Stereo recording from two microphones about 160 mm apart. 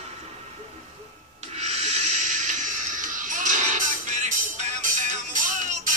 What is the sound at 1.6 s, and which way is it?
Music, 45° right (ahead or behind).